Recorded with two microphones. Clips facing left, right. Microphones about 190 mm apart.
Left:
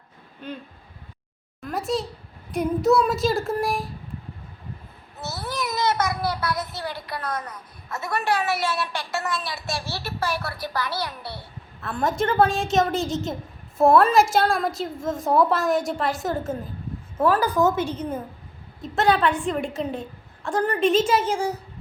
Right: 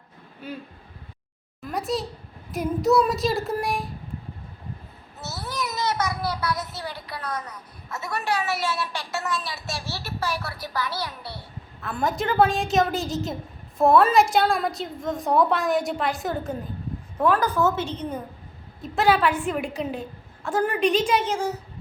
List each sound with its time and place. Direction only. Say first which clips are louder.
0.4 s speech: left 1 dB; 5° right (ahead or behind)
1.6 s a sound: left 1 dB; centre (ahead or behind)
2.5 s a woman's voice: left 1 dB; centre (ahead or behind)
5.2 s a child's voice: left 2 dB; 50° left (ahead or behind)
11.8 s a woman's voice: left 2 dB; centre (ahead or behind)
18.8 s a woman's voice: even; centre (ahead or behind)